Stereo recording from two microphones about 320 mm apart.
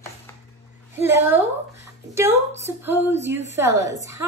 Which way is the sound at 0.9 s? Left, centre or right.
Centre.